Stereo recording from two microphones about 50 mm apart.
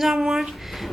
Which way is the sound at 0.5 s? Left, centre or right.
Centre.